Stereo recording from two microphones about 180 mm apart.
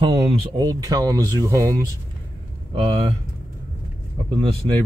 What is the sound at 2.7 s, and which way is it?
Speech, 30° right (ahead or behind).